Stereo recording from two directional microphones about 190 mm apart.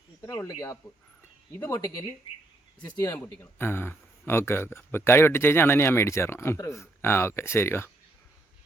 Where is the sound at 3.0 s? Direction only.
10° left (ahead or behind).